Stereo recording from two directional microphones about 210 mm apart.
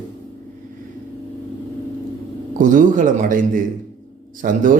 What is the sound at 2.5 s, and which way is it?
A man's voice, 40° right (ahead or behind).